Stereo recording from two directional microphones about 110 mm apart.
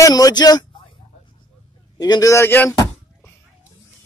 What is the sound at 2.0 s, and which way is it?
Speech, 35° left (ahead or behind).